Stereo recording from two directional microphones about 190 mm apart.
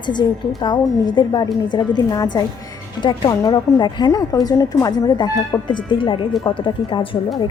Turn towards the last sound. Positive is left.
turn(degrees=25)  # may be behind; listen again after turning